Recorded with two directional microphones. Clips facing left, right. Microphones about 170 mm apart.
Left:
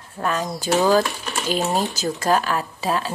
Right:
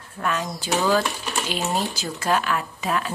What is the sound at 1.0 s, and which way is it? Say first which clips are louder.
Speech: even; centre (ahead or behind).